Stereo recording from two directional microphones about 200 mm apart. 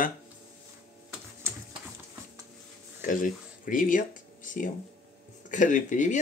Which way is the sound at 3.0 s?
40° left (ahead or behind).